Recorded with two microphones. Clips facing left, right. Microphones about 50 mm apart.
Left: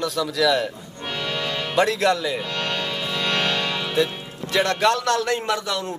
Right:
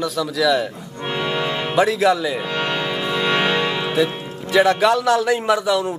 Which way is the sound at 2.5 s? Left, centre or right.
Centre.